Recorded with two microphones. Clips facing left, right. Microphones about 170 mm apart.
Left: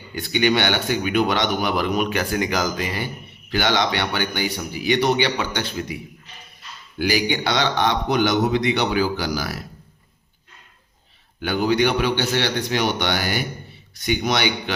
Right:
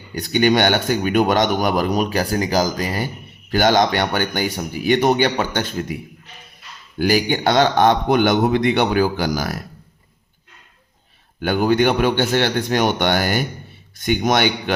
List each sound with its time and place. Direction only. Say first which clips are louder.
0.1 s speech: right 3 dB; 45° right (ahead or behind)
7.0 s speech: right 4 dB; 45° right (ahead or behind)
11.3 s speech: right 3 dB; 50° right (ahead or behind)